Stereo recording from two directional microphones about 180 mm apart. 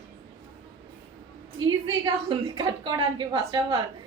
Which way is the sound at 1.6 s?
25° right (ahead or behind).